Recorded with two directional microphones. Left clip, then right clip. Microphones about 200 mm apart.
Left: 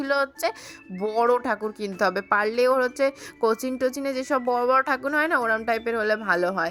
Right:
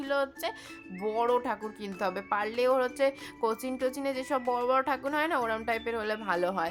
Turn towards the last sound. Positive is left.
turn(degrees=20)  # may be behind; listen again after turning